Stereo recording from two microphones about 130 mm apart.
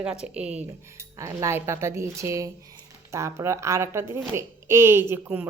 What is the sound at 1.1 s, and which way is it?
A woman's voice, 20° right (ahead or behind).